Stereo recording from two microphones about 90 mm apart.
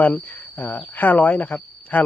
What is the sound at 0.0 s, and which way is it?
Speech, 20° left (ahead or behind).